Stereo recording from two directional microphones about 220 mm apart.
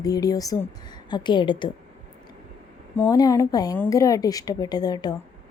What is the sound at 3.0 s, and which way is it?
A woman's voice, 15° left (ahead or behind).